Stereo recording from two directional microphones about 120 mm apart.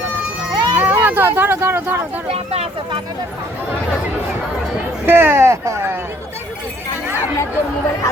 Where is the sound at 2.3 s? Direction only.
60° right (ahead or behind).